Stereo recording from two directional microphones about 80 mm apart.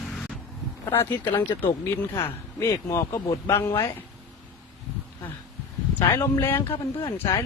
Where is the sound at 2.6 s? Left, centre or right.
Left.